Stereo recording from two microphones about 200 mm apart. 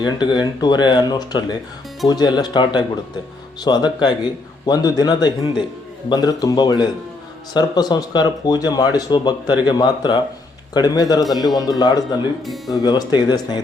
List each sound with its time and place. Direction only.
0.0 s speech: 20° left (ahead or behind)
12.5 s speech: centre (ahead or behind)
12.8 s speech: 20° left (ahead or behind)